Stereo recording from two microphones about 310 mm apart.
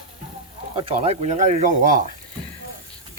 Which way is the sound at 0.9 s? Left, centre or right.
Centre.